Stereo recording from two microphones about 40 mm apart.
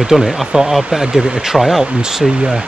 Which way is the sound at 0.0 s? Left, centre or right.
Centre.